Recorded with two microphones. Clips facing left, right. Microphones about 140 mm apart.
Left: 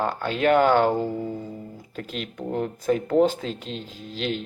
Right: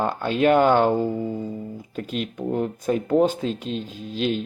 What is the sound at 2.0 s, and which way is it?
Speech, 15° right (ahead or behind).